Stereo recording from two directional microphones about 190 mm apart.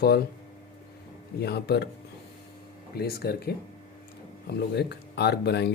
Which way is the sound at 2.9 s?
55° left (ahead or behind).